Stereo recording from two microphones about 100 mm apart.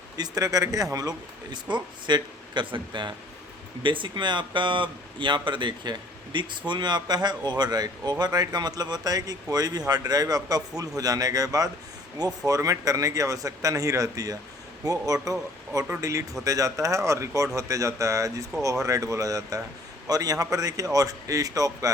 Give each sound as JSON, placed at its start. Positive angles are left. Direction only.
{"t": 0.2, "sound": "speech", "side_deg": -35}